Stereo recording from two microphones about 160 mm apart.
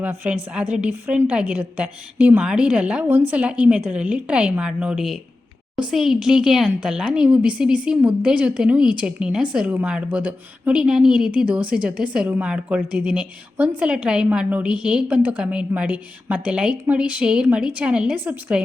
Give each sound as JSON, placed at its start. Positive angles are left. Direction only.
{"t": 0.0, "sound": "speech", "side_deg": -10}